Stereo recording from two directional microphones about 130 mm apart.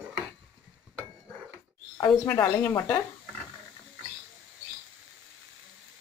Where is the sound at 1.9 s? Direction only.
30° left (ahead or behind).